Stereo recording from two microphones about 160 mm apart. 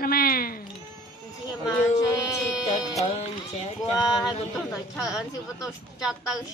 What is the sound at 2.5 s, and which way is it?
Music, 5° right (ahead or behind).